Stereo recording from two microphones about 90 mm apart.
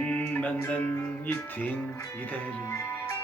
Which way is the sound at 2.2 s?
15° left (ahead or behind).